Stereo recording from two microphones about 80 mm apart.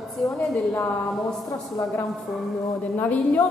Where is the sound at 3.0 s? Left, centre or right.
Left.